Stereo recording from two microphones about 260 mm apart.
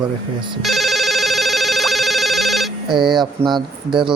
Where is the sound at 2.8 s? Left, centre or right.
Centre.